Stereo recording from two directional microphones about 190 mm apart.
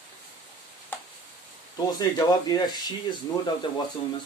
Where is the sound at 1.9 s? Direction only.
20° left (ahead or behind).